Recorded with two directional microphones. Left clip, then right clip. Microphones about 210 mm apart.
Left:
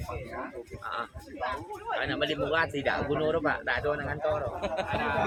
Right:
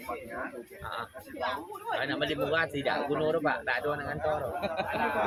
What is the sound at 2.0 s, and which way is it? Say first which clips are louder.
Speech: left 1 dB; 5° left (ahead or behind).